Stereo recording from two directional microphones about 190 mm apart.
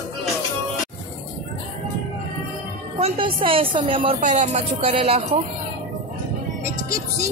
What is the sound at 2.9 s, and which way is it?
A woman's voice, 30° right (ahead or behind).